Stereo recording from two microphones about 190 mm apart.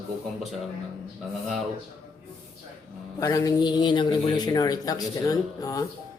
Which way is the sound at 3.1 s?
20° left (ahead or behind).